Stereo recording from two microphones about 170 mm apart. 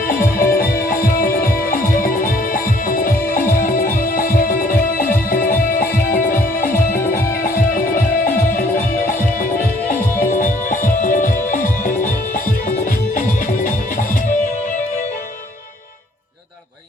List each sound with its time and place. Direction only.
0.1 s music: 55° left (ahead or behind)